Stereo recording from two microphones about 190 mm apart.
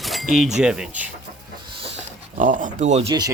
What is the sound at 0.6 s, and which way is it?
Speech, 5° right (ahead or behind).